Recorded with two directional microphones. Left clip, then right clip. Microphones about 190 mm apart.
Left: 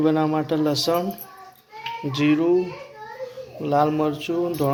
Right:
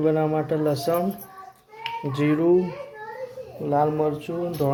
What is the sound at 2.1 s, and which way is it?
Speech, 20° right (ahead or behind).